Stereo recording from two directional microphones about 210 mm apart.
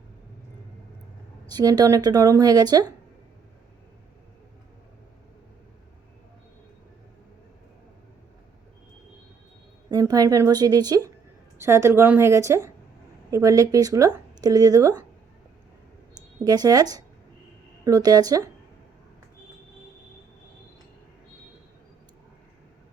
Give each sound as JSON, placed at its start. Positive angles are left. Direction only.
{"t": 1.5, "sound": "speech", "side_deg": -20}
{"t": 9.9, "sound": "speech", "side_deg": -15}
{"t": 16.4, "sound": "speech", "side_deg": -15}